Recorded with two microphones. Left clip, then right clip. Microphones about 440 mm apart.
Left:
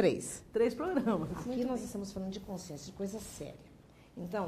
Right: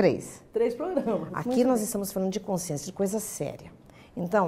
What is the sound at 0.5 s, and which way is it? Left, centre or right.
Speech, left.